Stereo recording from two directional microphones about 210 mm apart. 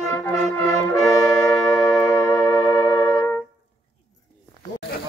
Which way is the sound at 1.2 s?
5° left (ahead or behind).